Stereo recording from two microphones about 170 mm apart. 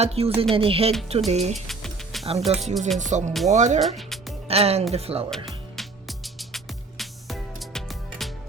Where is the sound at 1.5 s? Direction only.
Centre (ahead or behind).